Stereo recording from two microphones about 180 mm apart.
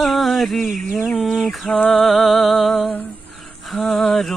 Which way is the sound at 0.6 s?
45° right (ahead or behind).